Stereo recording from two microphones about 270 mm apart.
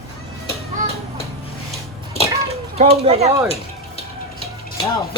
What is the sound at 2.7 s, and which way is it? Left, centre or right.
Speech, right.